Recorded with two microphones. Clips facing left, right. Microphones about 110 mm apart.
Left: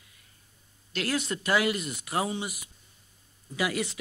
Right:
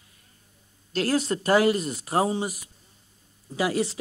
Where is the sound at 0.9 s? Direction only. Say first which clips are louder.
Right 6 dB; 35° right (ahead or behind).